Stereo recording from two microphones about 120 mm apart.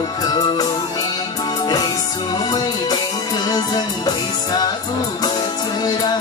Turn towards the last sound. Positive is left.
turn(degrees=35)  # may be behind; listen again after turning